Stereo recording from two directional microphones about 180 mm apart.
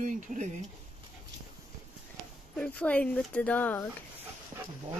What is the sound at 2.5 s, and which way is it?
Speech, 5° left (ahead or behind).